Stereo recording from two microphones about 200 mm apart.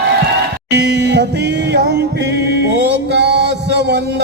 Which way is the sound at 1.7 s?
55° right (ahead or behind).